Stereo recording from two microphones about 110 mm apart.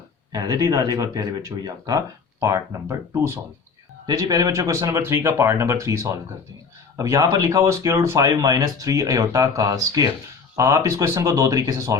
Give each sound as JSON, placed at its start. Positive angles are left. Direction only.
{"t": 0.3, "sound": "speech", "side_deg": -30}